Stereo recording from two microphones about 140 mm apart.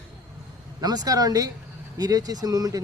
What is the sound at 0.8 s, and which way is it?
Speech, 30° right (ahead or behind).